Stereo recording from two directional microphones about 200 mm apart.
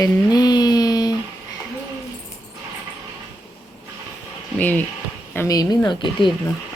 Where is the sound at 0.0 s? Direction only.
20° left (ahead or behind).